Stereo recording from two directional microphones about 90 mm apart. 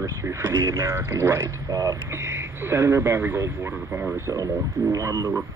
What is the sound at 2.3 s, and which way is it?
A man's voice, 30° right (ahead or behind).